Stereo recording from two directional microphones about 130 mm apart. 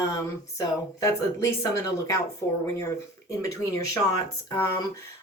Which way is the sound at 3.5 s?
25° left (ahead or behind).